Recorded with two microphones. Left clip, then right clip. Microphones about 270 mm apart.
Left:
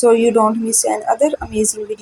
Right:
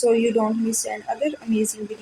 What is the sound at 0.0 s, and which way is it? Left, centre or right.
A woman's voice, centre.